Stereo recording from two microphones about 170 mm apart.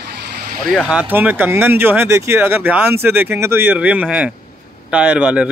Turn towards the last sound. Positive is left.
turn(degrees=-10)  # may be behind; listen again after turning